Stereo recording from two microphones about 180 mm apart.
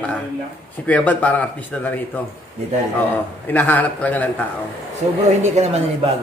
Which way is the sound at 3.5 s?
10° left (ahead or behind).